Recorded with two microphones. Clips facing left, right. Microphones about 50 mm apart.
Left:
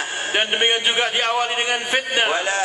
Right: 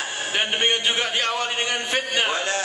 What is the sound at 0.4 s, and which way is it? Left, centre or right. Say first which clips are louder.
A man's voice: left 2 dB; centre.